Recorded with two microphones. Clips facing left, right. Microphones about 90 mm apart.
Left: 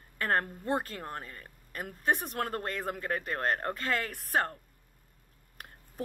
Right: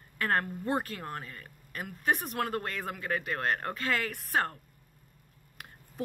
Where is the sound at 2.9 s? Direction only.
40° left (ahead or behind).